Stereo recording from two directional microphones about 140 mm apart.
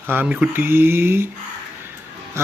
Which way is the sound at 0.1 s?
15° right (ahead or behind).